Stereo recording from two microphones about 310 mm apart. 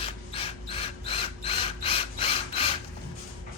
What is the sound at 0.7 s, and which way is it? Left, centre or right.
Ratchet, centre.